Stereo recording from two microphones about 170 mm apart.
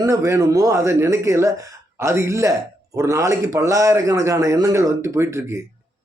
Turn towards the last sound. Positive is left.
turn(degrees=-15)  # may be behind; listen again after turning